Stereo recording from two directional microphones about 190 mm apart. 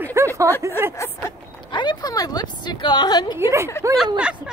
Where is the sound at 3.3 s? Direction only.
15° right (ahead or behind).